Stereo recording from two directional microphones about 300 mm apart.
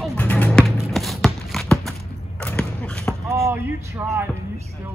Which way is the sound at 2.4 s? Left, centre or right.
Centre.